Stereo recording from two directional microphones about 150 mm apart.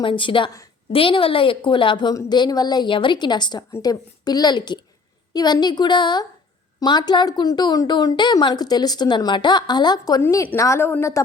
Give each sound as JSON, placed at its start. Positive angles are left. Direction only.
{"t": 0.0, "sound": "a woman's voice", "side_deg": 35}
{"t": 10.2, "sound": "a woman's voice", "side_deg": 15}